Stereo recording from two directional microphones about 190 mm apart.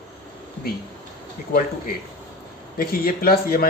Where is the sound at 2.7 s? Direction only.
50° left (ahead or behind).